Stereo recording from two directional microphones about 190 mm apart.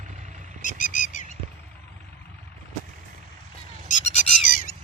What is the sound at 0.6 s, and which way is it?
Bird, 40° left (ahead or behind).